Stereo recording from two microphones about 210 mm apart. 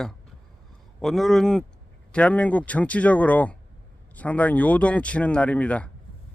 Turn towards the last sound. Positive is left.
turn(degrees=5)  # may be behind; listen again after turning